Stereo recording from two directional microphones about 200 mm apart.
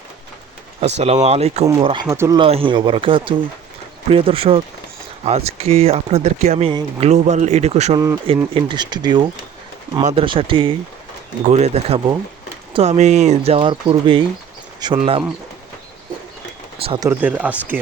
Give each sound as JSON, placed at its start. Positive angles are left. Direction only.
{"t": 0.8, "sound": "speech", "side_deg": -35}
{"t": 2.0, "sound": "speech", "side_deg": -15}
{"t": 2.4, "sound": "speech", "side_deg": -25}
{"t": 7.9, "sound": "speech", "side_deg": -15}
{"t": 10.0, "sound": "speech", "side_deg": -35}
{"t": 10.2, "sound": "speech", "side_deg": -25}
{"t": 16.8, "sound": "speech", "side_deg": -25}
{"t": 17.1, "sound": "speech", "side_deg": -10}